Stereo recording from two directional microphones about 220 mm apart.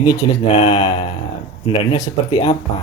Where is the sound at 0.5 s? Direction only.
25° left (ahead or behind).